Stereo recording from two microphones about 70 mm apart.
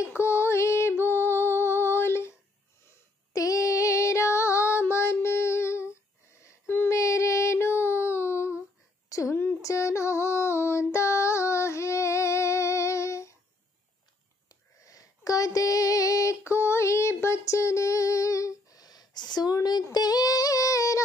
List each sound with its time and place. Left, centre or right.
0.0 s music: left
3.3 s female singing: left
6.7 s child singing: left
7.0 s child singing: left
9.1 s a sound: left
9.6 s female singing: left
14.8 s female singing: left
19.5 s a sound: left
19.9 s female singing: left